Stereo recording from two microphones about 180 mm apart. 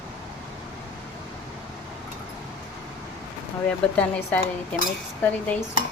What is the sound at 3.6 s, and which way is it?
Speech, 5° left (ahead or behind).